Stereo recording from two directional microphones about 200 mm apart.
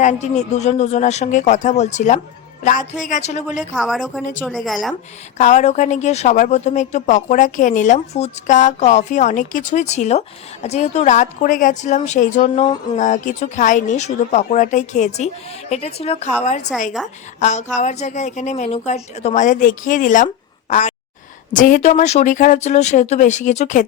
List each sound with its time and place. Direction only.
0.0 s a woman's voice: 35° left (ahead or behind)
3.6 s speech: centre (ahead or behind)
5.4 s a woman's voice: 35° left (ahead or behind)